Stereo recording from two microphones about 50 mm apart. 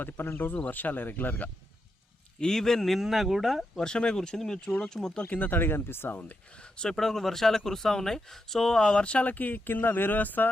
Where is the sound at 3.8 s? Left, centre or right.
Centre.